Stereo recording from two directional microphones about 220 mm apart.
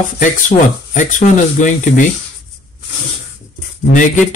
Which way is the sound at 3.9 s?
35° left (ahead or behind).